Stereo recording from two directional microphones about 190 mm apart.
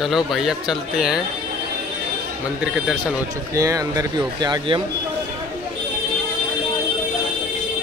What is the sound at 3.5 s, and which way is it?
Speech, 15° right (ahead or behind).